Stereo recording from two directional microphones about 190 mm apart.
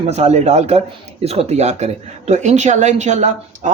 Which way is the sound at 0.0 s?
35° right (ahead or behind).